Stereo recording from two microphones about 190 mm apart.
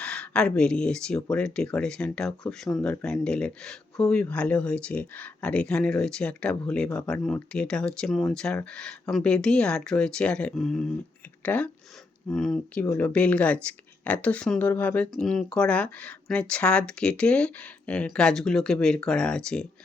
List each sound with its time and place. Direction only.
0.0 s speech: 5° left (ahead or behind)
12.8 s speech: 15° left (ahead or behind)
13.1 s speech: 5° left (ahead or behind)